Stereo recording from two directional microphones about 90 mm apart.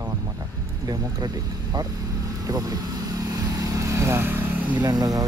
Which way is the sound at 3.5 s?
35° right (ahead or behind).